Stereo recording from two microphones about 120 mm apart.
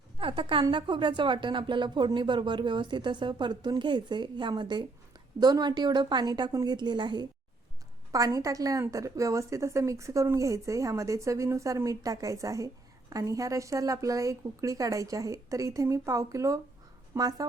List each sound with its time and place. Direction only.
0.2 s a woman's voice: 45° right (ahead or behind)
8.1 s a woman's voice: 30° right (ahead or behind)